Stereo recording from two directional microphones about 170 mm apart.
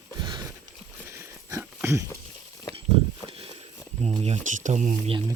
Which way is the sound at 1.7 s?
15° right (ahead or behind).